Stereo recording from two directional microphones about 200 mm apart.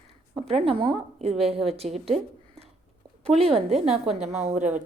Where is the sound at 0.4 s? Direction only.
30° right (ahead or behind).